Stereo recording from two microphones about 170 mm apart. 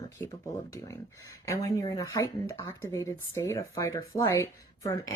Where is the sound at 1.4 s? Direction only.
20° left (ahead or behind).